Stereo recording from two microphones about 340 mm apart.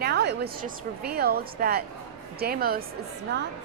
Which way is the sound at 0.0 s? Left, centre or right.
Right.